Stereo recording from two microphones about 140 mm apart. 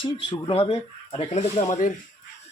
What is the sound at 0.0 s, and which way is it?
Speech, 40° left (ahead or behind).